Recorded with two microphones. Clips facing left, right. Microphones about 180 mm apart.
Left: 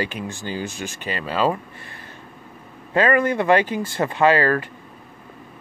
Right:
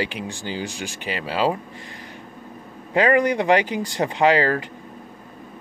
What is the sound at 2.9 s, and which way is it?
Speech, 15° right (ahead or behind).